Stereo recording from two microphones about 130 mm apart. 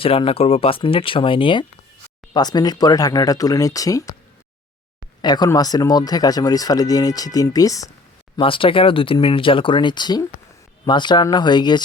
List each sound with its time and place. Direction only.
0.0 s speech: 45° left (ahead or behind); by 4.1 s 25° left (ahead or behind)
5.2 s speech: 30° left (ahead or behind)
8.4 s speech: 45° left (ahead or behind)